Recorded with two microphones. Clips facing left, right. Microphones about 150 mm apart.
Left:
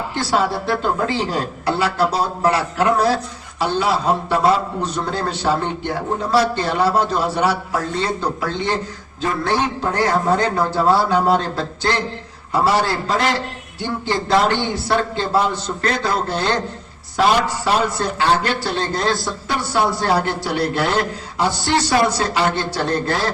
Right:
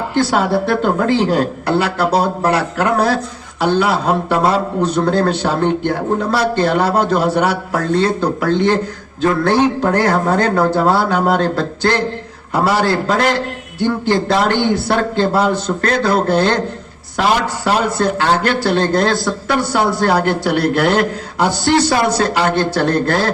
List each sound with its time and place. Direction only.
0.2 s a man's voice: 55° right (ahead or behind)
14.3 s a man's voice: 65° right (ahead or behind)
17.7 s a man's voice: 60° right (ahead or behind)